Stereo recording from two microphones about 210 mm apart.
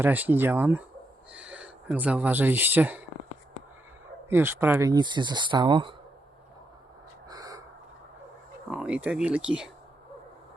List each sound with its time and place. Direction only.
0.0 s speech: 10° right (ahead or behind)
4.3 s speech: 10° right (ahead or behind)
7.3 s a sound: 15° right (ahead or behind)
8.7 s speech: 5° right (ahead or behind)